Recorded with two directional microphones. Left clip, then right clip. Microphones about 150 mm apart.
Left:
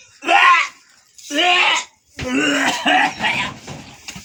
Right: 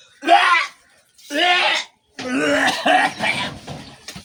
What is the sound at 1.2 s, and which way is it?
Sheep, 20° left (ahead or behind).